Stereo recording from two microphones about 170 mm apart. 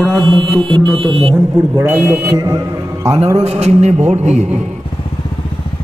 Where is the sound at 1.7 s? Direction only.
15° right (ahead or behind).